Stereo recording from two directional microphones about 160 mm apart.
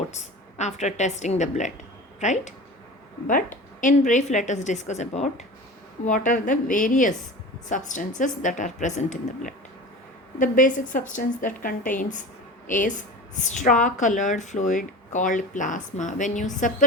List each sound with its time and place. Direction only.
0.1 s a woman's voice: 45° left (ahead or behind)